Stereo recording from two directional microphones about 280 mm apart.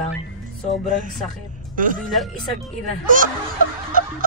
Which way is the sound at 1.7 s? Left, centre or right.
Right.